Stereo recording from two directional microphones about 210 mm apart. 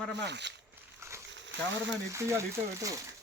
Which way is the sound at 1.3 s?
60° right (ahead or behind).